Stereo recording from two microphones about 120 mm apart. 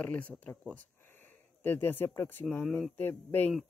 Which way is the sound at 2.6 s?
Centre (ahead or behind).